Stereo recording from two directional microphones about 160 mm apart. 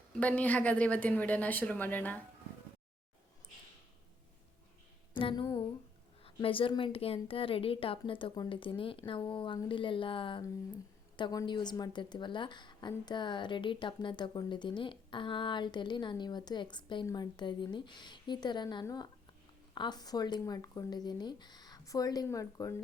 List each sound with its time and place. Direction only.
0.1 s a woman's voice: 10° left (ahead or behind)
5.1 s a woman's voice: 30° left (ahead or behind)